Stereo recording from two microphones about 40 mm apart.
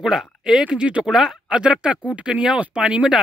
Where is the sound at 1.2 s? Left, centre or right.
Centre.